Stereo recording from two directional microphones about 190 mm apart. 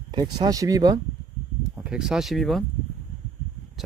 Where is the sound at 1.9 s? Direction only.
5° right (ahead or behind).